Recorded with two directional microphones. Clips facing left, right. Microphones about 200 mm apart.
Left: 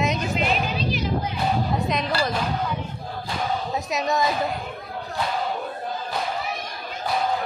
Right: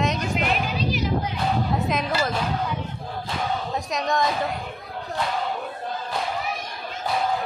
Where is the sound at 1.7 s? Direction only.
Centre (ahead or behind).